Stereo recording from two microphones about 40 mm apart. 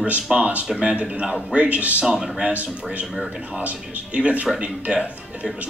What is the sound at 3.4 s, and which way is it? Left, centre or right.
Speech, right.